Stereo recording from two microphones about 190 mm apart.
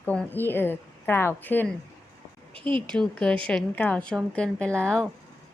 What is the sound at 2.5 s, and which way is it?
Speech, 25° right (ahead or behind).